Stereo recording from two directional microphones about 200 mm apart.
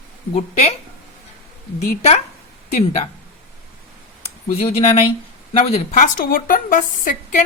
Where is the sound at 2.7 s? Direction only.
35° left (ahead or behind).